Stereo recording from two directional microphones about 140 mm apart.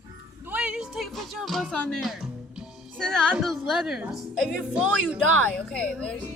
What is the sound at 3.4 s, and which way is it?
A woman's voice, centre (ahead or behind).